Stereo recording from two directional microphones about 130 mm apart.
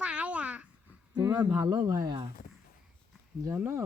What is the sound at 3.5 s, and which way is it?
Speech, 20° right (ahead or behind).